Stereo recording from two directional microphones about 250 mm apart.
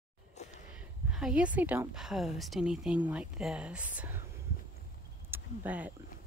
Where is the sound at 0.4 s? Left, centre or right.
Left.